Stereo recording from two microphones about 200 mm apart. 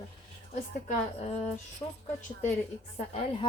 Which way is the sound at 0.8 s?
30° left (ahead or behind).